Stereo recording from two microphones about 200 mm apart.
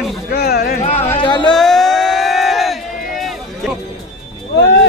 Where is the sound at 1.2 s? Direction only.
25° left (ahead or behind).